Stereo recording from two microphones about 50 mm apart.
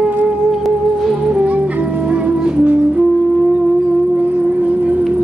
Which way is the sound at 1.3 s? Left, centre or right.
Right.